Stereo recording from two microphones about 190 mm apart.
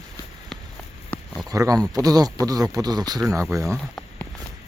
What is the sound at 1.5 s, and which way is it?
Speech, 20° right (ahead or behind).